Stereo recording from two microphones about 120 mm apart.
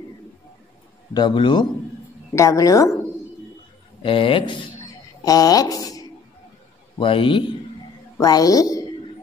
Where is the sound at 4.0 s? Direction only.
45° left (ahead or behind).